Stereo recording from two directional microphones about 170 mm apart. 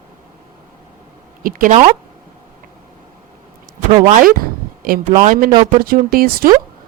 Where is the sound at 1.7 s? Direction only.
45° right (ahead or behind).